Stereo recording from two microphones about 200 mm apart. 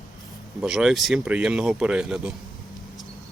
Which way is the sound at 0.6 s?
5° right (ahead or behind).